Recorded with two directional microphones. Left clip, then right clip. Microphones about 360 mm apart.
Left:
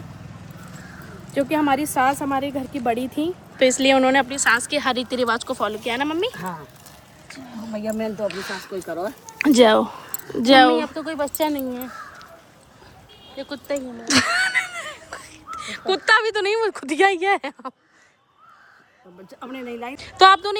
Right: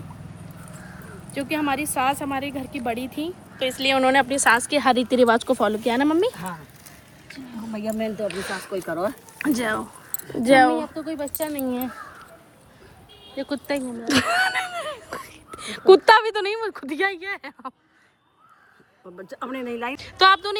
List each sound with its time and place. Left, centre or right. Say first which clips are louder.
1.3 s speech: left 5 dB; centre
4.4 s speech: right 1 dB; centre
7.8 s speech: left 1 dB; centre
8.9 s speech: right 2 dB; right
9.4 s speech: left 10 dB; centre
10.8 s speech: left 4 dB; centre
13.3 s speech: right 1 dB; right
14.0 s a sound: left 2 dB; centre
15.1 s wheeze: left 1 dB; centre
15.9 s speech: right 4 dB; centre
19.5 s speech: right 2 dB; centre